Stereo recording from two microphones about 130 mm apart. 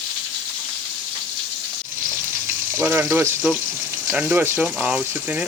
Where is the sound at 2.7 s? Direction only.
15° right (ahead or behind).